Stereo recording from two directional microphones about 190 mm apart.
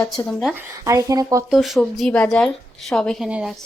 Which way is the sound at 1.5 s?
Centre (ahead or behind).